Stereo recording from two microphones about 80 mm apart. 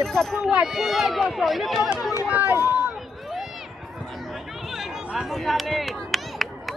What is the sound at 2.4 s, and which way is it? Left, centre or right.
Speech, right.